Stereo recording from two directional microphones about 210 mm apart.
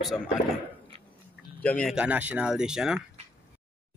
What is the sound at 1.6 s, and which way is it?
Speech, 5° left (ahead or behind).